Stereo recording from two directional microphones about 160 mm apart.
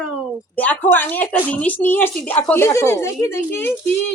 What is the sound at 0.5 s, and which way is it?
Speech, 10° left (ahead or behind).